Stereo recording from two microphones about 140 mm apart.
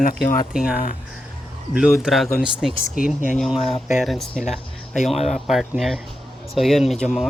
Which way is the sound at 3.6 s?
40° left (ahead or behind).